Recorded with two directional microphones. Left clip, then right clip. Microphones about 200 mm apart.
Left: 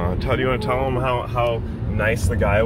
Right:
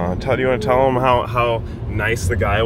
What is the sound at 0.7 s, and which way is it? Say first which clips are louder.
Speech: right 7 dB; 35° right (ahead or behind).